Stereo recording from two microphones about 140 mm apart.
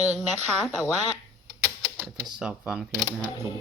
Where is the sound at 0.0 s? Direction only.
50° right (ahead or behind).